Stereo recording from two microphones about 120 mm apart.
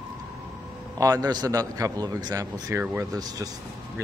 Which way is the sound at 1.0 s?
35° right (ahead or behind).